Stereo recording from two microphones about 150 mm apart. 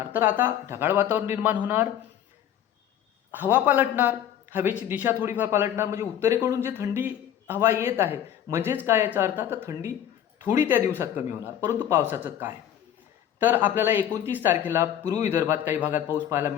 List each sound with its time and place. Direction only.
0.1 s a man's voice: 15° right (ahead or behind)
3.5 s a man's voice: 10° right (ahead or behind)